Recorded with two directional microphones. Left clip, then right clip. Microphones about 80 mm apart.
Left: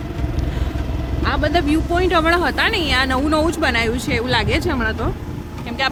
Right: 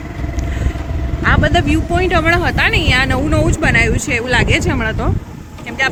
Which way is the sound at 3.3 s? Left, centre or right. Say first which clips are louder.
Right 1 dB; left.